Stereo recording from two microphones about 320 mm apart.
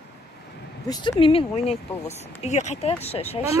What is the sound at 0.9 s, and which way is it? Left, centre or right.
Speech, centre.